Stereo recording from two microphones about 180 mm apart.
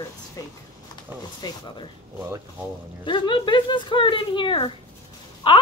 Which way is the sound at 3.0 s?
25° left (ahead or behind).